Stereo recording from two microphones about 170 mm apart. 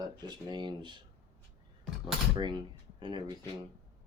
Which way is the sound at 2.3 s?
25° right (ahead or behind).